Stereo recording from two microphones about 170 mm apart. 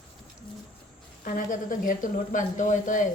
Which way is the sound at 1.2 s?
50° left (ahead or behind).